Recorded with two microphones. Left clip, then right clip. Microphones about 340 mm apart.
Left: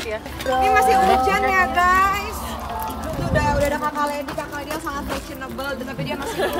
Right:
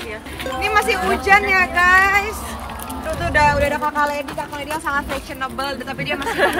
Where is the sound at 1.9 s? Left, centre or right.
Centre.